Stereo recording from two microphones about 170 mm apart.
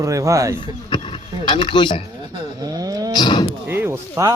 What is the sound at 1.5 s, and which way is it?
Speech, 30° left (ahead or behind).